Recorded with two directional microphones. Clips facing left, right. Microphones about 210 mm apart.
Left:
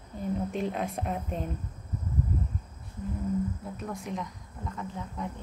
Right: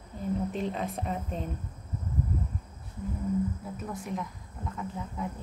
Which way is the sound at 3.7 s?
Centre (ahead or behind).